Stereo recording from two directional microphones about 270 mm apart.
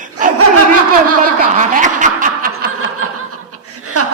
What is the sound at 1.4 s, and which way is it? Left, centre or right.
Snicker, right.